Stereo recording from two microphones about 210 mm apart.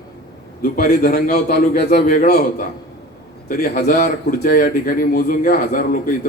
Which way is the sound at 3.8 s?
40° left (ahead or behind).